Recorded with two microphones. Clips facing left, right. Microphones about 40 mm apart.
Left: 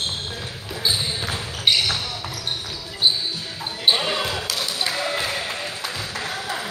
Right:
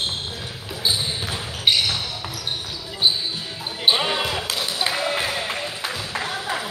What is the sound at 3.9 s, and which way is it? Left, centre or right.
Basketball bounce, centre.